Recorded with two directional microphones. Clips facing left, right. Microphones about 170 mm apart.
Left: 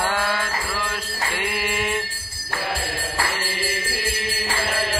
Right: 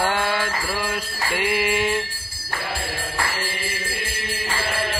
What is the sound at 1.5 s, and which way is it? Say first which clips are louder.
Mantra: right 5 dB; centre (ahead or behind).